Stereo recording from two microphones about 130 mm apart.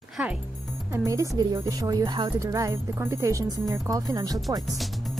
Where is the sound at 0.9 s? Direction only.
25° right (ahead or behind).